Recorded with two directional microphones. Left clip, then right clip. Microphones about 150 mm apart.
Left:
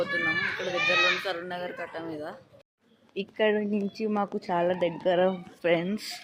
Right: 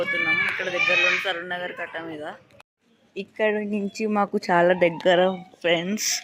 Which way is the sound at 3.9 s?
15° right (ahead or behind).